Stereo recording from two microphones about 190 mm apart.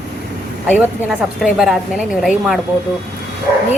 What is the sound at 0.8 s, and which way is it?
A woman's voice, 5° right (ahead or behind).